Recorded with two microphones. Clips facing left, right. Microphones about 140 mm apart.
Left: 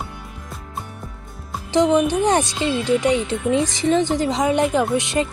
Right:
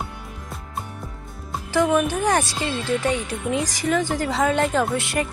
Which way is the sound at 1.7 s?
20° left (ahead or behind).